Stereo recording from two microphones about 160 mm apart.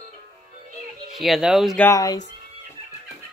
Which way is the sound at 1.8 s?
20° left (ahead or behind).